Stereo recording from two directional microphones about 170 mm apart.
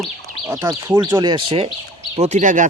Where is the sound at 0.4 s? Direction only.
15° right (ahead or behind).